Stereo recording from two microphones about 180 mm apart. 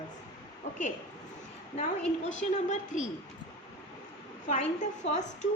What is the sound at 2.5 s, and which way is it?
Speech, 40° left (ahead or behind).